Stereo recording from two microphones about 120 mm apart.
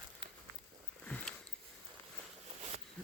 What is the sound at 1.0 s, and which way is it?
Sniff, 10° left (ahead or behind).